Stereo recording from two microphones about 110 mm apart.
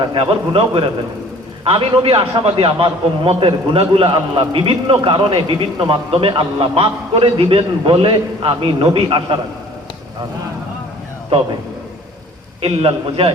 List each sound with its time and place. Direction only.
0.0 s a man's voice: 50° right (ahead or behind)
11.3 s a man's voice: 60° right (ahead or behind)
12.6 s a man's voice: 55° right (ahead or behind)